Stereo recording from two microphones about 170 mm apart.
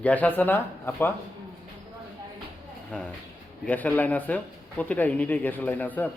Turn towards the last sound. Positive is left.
turn(degrees=10)  # may be behind; listen again after turning